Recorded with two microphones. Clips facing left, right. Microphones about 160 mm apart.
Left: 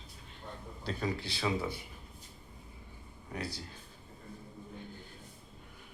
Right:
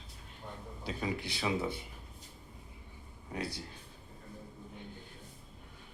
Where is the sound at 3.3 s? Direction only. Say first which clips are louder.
Right 1 dB; 25° right (ahead or behind).